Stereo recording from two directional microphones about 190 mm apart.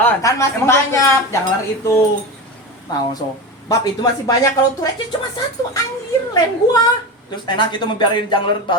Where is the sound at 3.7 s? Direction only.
20° left (ahead or behind).